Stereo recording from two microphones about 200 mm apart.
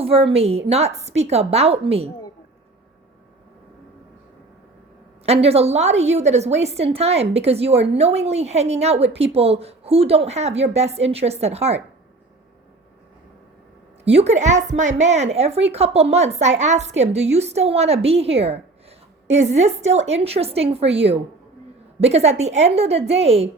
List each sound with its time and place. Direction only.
0.0 s a woman's voice: 30° right (ahead or behind)
5.2 s a woman's voice: 30° right (ahead or behind)
14.0 s a woman's voice: 30° right (ahead or behind)
22.0 s a woman's voice: 30° right (ahead or behind)